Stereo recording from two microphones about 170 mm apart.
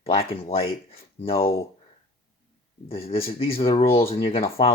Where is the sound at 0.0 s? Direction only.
35° left (ahead or behind).